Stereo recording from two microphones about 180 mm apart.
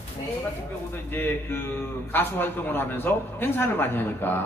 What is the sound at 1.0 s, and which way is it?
A man's voice, 10° left (ahead or behind).